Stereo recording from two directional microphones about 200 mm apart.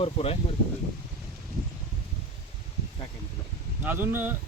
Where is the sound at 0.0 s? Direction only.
30° left (ahead or behind).